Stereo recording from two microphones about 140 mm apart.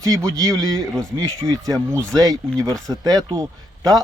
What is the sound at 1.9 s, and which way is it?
Speech, 5° left (ahead or behind).